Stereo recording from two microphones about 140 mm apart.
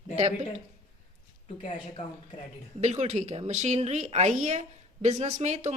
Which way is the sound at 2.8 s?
50° right (ahead or behind).